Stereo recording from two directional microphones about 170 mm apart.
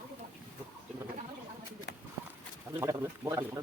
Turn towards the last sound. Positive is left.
turn(degrees=-20)  # may be behind; listen again after turning